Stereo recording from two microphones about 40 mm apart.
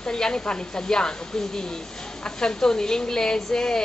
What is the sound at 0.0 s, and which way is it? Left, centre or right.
Speech, centre.